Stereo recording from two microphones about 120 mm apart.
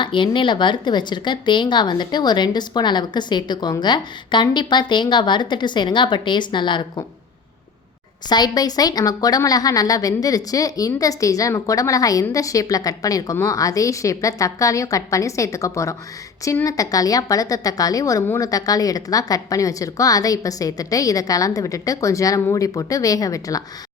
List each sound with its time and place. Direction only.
0.0 s a woman's voice: 45° left (ahead or behind)
8.3 s a woman's voice: 35° left (ahead or behind)